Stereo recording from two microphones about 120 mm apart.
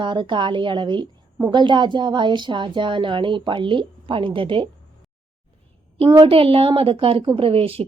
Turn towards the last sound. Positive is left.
turn(degrees=-50)  # may be behind; listen again after turning